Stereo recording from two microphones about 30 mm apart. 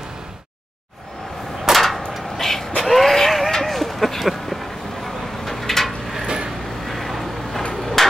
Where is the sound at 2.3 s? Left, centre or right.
Centre.